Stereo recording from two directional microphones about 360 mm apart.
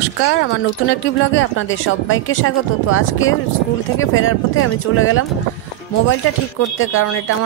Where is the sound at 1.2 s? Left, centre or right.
Left.